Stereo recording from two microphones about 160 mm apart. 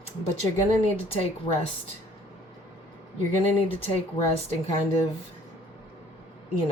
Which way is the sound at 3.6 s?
35° left (ahead or behind).